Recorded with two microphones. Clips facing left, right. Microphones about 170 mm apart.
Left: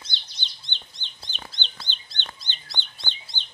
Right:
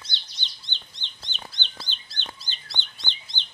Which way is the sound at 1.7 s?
5° right (ahead or behind).